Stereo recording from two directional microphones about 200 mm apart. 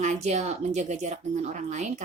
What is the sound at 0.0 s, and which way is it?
A woman's voice, 35° right (ahead or behind).